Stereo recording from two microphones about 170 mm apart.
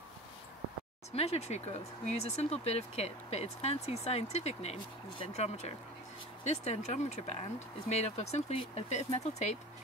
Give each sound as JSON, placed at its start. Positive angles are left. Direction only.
{"t": 1.1, "sound": "speech", "side_deg": 35}